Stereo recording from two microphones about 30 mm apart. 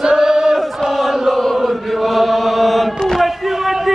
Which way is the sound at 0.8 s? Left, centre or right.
Centre.